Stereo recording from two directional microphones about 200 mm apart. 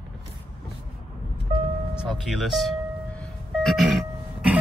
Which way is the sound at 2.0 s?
Centre (ahead or behind).